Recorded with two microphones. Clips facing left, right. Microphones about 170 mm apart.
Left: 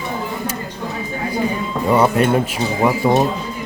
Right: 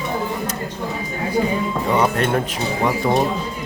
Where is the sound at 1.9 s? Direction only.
10° left (ahead or behind).